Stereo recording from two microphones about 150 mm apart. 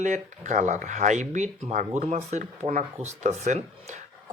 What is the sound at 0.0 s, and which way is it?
Speech, 55° right (ahead or behind).